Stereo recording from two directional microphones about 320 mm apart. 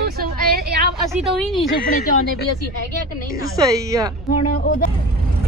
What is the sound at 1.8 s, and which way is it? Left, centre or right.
Speech, left.